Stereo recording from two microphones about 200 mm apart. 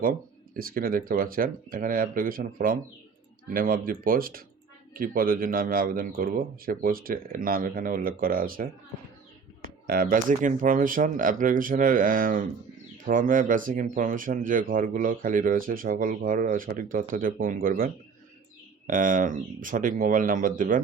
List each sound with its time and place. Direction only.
0.5 s speech: 45° right (ahead or behind)
9.8 s speech: 50° right (ahead or behind)